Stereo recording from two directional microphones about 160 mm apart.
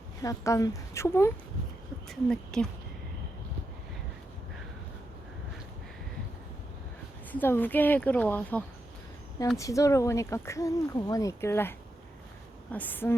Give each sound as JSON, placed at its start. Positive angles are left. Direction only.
{"t": 0.2, "sound": "speech", "side_deg": 20}
{"t": 2.0, "sound": "speech", "side_deg": 5}
{"t": 7.3, "sound": "speech", "side_deg": 10}
{"t": 12.7, "sound": "speech", "side_deg": 10}